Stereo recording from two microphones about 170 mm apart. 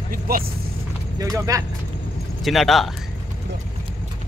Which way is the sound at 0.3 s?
60° right (ahead or behind).